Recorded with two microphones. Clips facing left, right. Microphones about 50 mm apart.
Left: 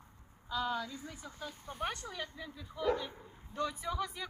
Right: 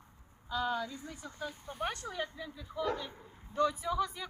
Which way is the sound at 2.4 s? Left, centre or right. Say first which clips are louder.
Right 3 dB; centre.